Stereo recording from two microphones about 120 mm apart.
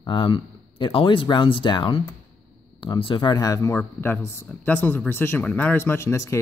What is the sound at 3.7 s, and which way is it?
Speech, 15° left (ahead or behind).